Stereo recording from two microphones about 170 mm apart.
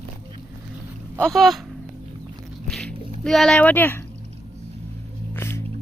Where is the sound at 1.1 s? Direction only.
5° left (ahead or behind).